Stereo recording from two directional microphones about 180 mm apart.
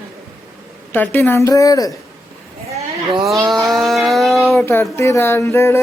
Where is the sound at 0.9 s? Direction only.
10° left (ahead or behind).